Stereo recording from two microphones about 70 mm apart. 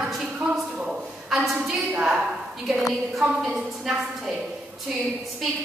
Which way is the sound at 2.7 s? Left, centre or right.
Centre.